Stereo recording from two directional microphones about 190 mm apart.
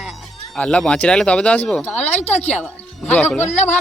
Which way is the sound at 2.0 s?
35° left (ahead or behind).